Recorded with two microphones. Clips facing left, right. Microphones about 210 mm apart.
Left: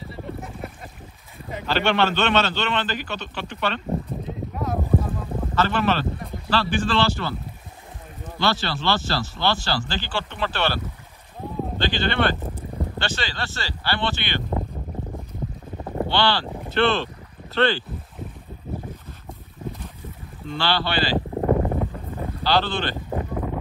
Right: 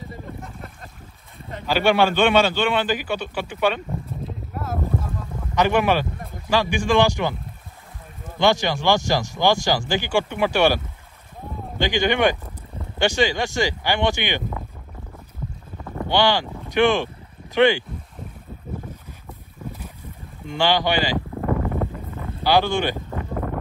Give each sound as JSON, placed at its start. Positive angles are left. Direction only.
{"t": 1.7, "sound": "speech", "side_deg": -10}
{"t": 5.5, "sound": "speech", "side_deg": -15}
{"t": 8.4, "sound": "speech", "side_deg": -15}
{"t": 11.8, "sound": "speech", "side_deg": -15}
{"t": 16.1, "sound": "speech", "side_deg": -10}
{"t": 20.4, "sound": "speech", "side_deg": -15}
{"t": 21.4, "sound": "a sound", "side_deg": 30}
{"t": 22.4, "sound": "speech", "side_deg": -10}